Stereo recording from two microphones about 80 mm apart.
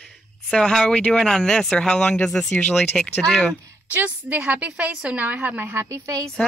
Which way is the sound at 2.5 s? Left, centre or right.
Centre.